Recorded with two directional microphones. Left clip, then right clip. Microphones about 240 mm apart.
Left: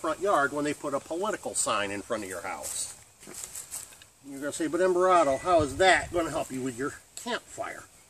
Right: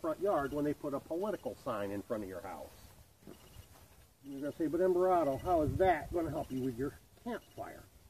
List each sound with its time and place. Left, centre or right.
0.0 s speech: centre
4.4 s speech: centre